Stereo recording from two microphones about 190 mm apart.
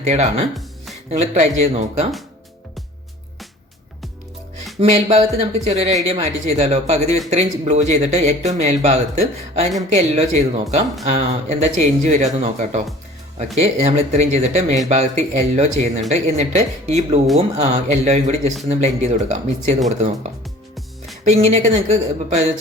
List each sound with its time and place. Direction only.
0.0 s speech: 35° right (ahead or behind)
4.8 s speech: 30° right (ahead or behind)